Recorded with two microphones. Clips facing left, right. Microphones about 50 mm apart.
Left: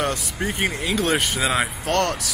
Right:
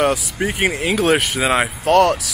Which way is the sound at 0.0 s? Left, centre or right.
Centre.